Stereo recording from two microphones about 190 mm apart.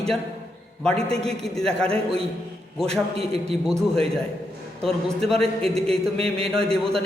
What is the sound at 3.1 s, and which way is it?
A man's voice, 30° right (ahead or behind).